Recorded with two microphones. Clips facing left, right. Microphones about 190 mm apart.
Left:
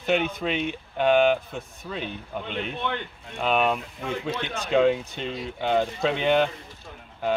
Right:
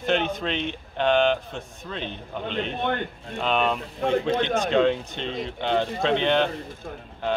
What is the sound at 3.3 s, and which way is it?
Speech, 5° left (ahead or behind).